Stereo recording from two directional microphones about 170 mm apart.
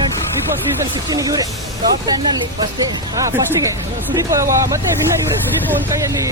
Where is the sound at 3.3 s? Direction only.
20° right (ahead or behind).